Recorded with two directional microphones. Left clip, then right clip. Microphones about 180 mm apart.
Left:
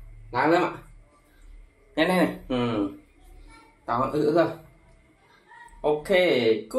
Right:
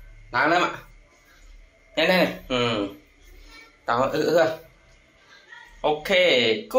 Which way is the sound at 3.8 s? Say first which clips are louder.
Right 3 dB; 5° left (ahead or behind).